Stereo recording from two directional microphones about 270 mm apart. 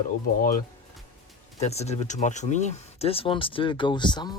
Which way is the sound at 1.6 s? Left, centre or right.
Left.